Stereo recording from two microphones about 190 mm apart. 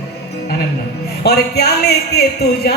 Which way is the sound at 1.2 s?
60° left (ahead or behind).